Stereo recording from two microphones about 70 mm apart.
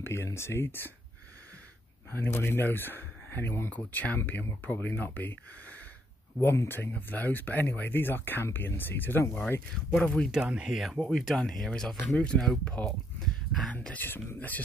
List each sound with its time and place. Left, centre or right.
0.0 s speech: left
2.0 s speech: left
3.7 s speech: left
6.4 s speech: left
6.8 s speech: left
9.8 s speech: centre
10.3 s speech: centre
11.0 s speech: centre
12.6 s speech: left
13.2 s a sound: centre
13.9 s speech: left